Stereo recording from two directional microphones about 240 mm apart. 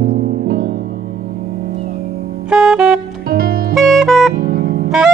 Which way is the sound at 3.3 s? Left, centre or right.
Right.